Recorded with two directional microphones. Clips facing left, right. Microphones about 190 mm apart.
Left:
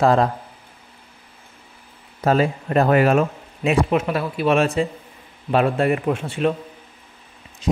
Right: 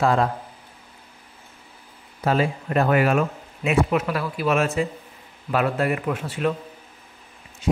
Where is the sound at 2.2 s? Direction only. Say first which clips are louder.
Left 3 dB; 40° left (ahead or behind); by 6.6 s 25° left (ahead or behind).